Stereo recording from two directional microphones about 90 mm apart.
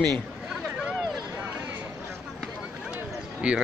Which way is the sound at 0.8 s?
10° right (ahead or behind).